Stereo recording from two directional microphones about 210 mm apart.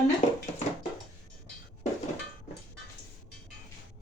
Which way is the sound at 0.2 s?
35° left (ahead or behind).